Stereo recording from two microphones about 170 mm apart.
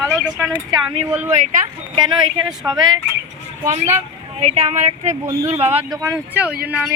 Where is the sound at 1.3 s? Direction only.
45° right (ahead or behind).